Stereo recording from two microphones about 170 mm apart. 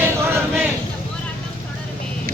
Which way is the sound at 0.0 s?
15° right (ahead or behind).